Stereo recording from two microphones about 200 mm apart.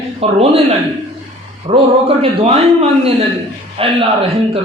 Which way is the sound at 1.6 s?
30° right (ahead or behind).